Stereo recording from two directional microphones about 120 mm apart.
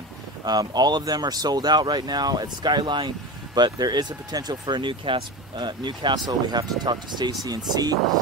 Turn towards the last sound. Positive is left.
turn(degrees=-35)  # may be behind; listen again after turning